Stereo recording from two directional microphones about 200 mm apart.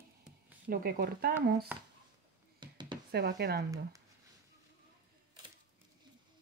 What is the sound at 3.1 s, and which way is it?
Speech, 55° right (ahead or behind).